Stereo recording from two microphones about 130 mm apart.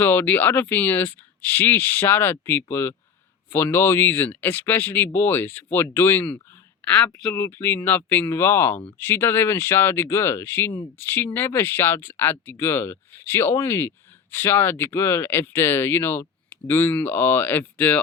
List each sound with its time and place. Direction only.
0.0 s speech: 15° left (ahead or behind)
7.3 s speech: 15° left (ahead or behind)